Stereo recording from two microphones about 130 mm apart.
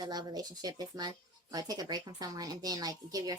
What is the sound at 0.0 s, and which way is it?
Speech, 30° right (ahead or behind).